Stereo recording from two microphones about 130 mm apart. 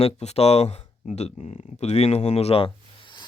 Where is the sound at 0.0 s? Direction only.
55° left (ahead or behind).